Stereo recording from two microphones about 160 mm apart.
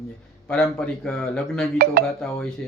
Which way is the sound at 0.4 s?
5° left (ahead or behind).